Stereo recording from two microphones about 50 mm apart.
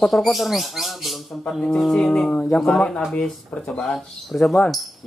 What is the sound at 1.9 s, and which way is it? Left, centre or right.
Speech, centre.